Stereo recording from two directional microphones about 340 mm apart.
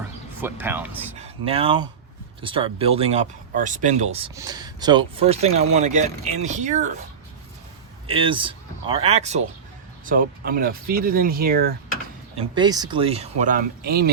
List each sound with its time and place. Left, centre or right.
0.4 s speech: centre
1.2 s speech: centre
8.0 s speech: centre
12.4 s speech: centre